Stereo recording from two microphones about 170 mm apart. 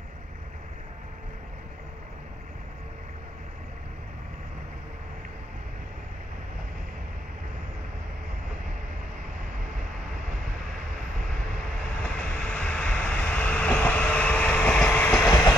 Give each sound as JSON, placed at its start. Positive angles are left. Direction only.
{"t": 12.2, "sound": "train", "side_deg": 5}
{"t": 15.2, "sound": "train", "side_deg": 20}